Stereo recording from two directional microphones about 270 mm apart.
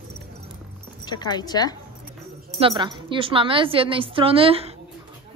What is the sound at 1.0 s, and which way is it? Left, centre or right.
Speech, centre.